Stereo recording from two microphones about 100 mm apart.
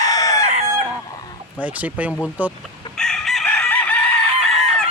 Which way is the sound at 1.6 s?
15° right (ahead or behind).